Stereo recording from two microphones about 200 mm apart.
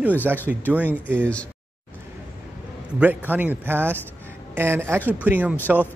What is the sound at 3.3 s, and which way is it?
A man's voice, 10° right (ahead or behind).